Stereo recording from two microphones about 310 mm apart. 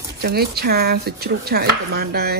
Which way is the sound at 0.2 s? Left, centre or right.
Right.